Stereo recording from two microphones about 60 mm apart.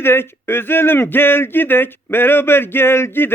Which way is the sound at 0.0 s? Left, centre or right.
Left.